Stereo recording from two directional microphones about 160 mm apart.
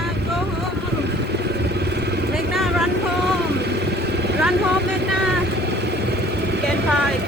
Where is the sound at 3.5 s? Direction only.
90° right.